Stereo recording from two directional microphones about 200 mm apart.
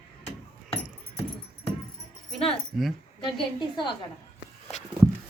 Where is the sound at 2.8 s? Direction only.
Centre (ahead or behind).